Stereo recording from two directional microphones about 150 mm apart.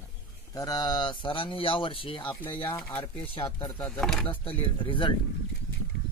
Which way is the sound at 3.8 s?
5° left (ahead or behind).